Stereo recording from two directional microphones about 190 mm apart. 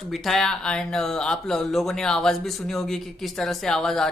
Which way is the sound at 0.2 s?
Centre (ahead or behind).